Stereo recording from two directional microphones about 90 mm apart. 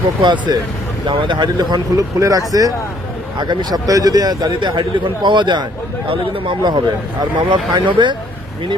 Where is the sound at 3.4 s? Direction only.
55° right (ahead or behind).